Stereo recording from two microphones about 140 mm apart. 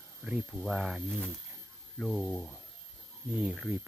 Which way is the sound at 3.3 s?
10° right (ahead or behind).